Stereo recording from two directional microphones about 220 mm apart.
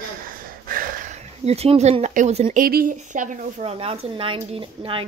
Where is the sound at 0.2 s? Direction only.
40° right (ahead or behind).